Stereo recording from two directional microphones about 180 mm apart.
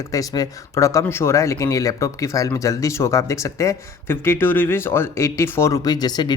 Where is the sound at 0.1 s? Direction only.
20° left (ahead or behind).